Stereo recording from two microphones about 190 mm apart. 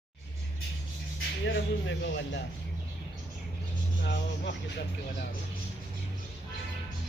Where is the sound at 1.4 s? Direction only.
70° left (ahead or behind).